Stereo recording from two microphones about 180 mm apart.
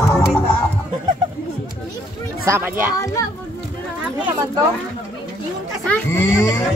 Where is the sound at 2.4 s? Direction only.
15° right (ahead or behind).